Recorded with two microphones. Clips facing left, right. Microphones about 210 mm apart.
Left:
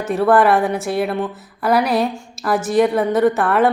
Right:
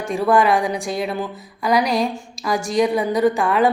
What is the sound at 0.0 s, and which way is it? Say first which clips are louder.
Speech: left 3 dB; 5° left (ahead or behind).